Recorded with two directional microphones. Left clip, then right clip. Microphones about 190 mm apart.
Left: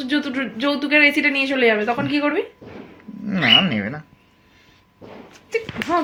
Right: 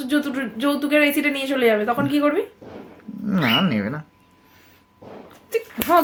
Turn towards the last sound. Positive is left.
turn(degrees=-30)  # may be behind; listen again after turning